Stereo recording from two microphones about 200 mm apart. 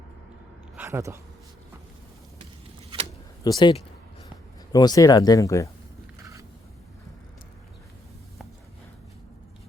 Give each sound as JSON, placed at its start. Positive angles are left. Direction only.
{"t": 0.8, "sound": "speech", "side_deg": -15}
{"t": 3.4, "sound": "speech", "side_deg": 20}